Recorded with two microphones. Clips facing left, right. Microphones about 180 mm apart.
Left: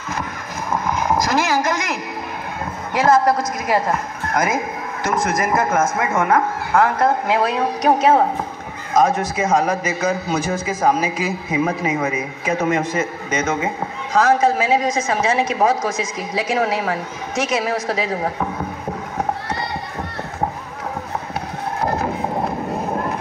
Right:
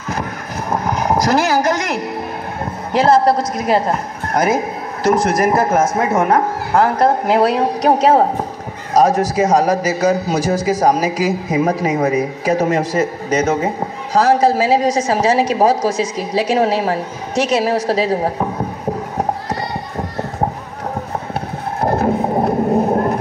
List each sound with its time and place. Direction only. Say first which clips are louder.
0.7 s vehicle: right 3 dB; 35° right (ahead or behind)
2.6 s a woman's voice: right 3 dB; 30° right (ahead or behind)
22.0 s a sound: right 6 dB; 40° right (ahead or behind)